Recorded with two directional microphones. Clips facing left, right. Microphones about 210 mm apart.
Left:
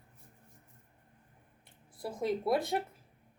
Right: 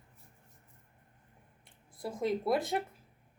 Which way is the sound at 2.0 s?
Centre (ahead or behind).